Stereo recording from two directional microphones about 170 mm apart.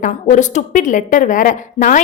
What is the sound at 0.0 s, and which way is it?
A woman's voice, 45° left (ahead or behind).